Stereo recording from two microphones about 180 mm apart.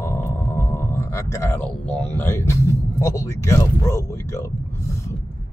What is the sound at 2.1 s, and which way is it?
Speech, 15° left (ahead or behind).